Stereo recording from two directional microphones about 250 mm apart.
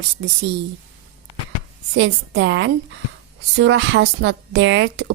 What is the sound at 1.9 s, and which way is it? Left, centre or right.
A woman's voice, right.